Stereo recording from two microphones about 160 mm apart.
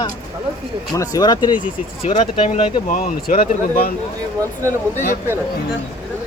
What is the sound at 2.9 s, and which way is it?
Speech, 60° left (ahead or behind).